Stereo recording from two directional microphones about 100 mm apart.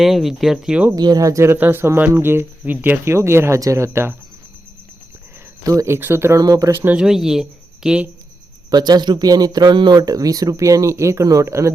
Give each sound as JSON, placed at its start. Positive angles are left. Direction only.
{"t": 0.0, "sound": "speech", "side_deg": 0}
{"t": 0.9, "sound": "speech", "side_deg": -40}
{"t": 5.6, "sound": "speech", "side_deg": -30}
{"t": 6.9, "sound": "speech", "side_deg": -5}
{"t": 8.7, "sound": "speech", "side_deg": -45}